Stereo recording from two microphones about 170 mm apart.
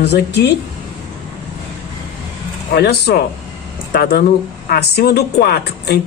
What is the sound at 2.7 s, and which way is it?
Speech, 70° left (ahead or behind).